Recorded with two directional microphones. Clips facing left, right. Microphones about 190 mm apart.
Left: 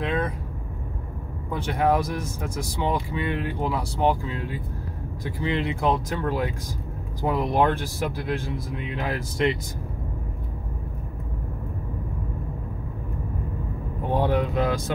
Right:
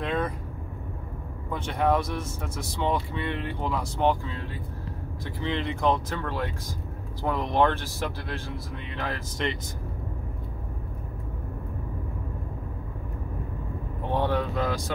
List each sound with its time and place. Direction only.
0.0 s vehicle: centre (ahead or behind)
1.5 s speech: 10° left (ahead or behind)
7.5 s speech: 10° left (ahead or behind)
14.1 s a sound: 15° left (ahead or behind)